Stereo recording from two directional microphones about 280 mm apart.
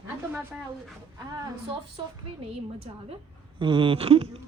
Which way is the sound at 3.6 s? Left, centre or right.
Centre.